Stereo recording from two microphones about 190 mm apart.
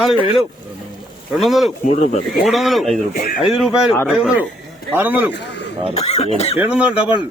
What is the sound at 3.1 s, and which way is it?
Speech, 50° left (ahead or behind).